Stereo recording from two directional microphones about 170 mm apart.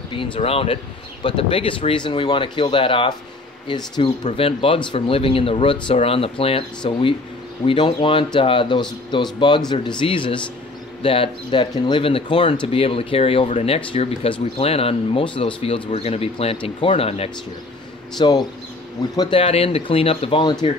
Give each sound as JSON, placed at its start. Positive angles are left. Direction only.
{"t": 0.1, "sound": "speech", "side_deg": 30}
{"t": 4.2, "sound": "speech", "side_deg": 35}